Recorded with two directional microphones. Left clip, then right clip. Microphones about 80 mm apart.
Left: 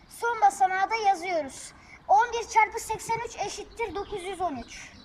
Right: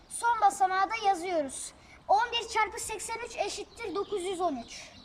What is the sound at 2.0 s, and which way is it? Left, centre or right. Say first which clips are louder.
A woman's voice: left 4 dB; centre.